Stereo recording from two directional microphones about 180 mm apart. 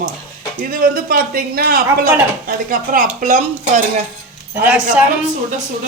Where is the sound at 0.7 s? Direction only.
55° right (ahead or behind).